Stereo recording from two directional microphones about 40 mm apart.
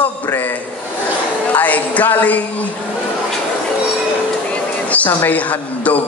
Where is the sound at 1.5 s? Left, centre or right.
Left.